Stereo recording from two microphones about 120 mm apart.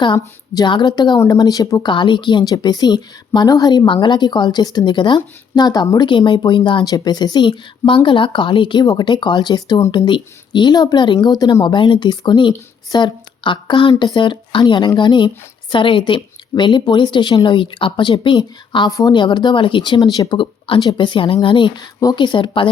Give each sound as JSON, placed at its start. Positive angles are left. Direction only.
{"t": 0.0, "sound": "speech", "side_deg": 40}
{"t": 18.9, "sound": "a woman's voice", "side_deg": 30}
{"t": 19.1, "sound": "speech", "side_deg": 40}